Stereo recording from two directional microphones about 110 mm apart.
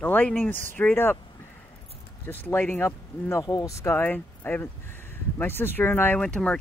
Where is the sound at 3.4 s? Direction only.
35° left (ahead or behind).